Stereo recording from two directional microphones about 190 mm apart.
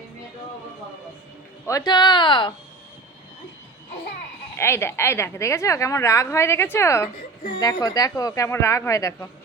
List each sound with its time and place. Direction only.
1.6 s speech: 20° left (ahead or behind)
4.5 s a woman's voice: 15° left (ahead or behind)